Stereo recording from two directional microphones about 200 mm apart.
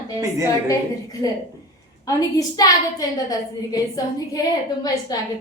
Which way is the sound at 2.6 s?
20° left (ahead or behind).